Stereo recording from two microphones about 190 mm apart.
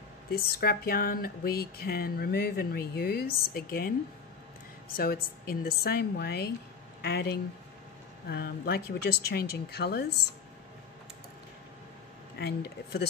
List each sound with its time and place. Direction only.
0.3 s speech: 55° left (ahead or behind)
4.9 s speech: 50° left (ahead or behind)
12.4 s speech: 55° left (ahead or behind)